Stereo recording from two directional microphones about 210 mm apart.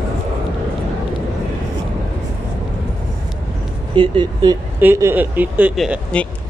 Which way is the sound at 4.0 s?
20° right (ahead or behind).